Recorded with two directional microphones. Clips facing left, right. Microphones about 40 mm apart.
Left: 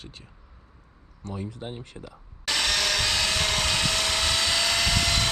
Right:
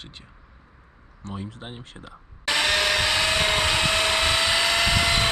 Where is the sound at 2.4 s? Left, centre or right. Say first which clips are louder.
Right 4 dB; centre.